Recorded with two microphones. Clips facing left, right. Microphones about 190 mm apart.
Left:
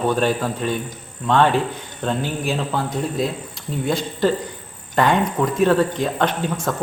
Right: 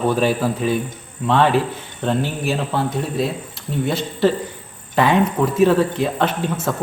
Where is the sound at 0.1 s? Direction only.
5° right (ahead or behind).